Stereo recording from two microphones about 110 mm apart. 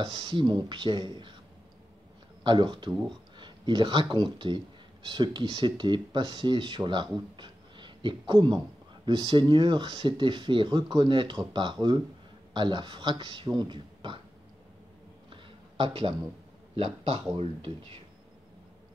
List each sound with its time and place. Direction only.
0.0 s speech: 40° right (ahead or behind)
2.4 s speech: 45° right (ahead or behind)
7.3 s a sound: 45° right (ahead or behind)
9.0 s speech: 45° right (ahead or behind)
15.8 s speech: 50° right (ahead or behind)